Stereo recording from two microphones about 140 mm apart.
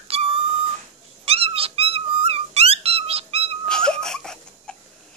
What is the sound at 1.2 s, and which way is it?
Cat, 45° right (ahead or behind).